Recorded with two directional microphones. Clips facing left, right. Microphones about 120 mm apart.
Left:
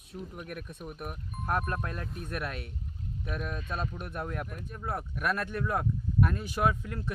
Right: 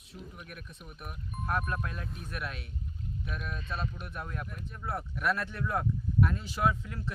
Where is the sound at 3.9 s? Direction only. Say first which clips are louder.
Left 4 dB; 50° left (ahead or behind).